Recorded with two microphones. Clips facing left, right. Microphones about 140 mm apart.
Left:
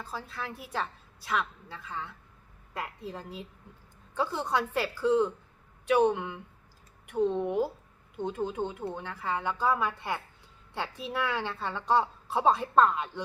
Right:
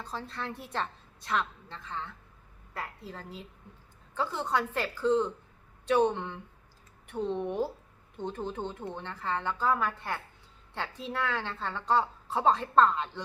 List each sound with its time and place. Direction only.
0.0 s a woman's voice: 5° left (ahead or behind)